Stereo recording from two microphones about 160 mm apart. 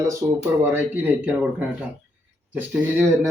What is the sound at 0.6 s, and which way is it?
Speech, 15° right (ahead or behind).